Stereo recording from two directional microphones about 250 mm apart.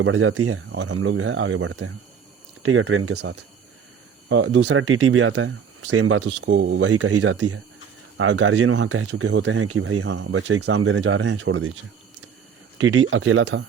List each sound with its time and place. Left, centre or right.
0.0 s speech: right
6.8 s speech: right
12.8 s speech: right